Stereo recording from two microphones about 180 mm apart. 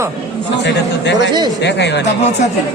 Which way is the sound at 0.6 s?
75° left (ahead or behind).